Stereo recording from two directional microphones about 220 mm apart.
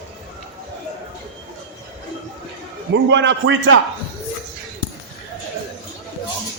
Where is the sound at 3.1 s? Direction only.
55° right (ahead or behind).